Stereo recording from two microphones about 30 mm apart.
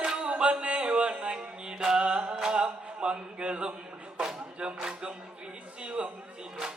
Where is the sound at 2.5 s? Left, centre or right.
Right.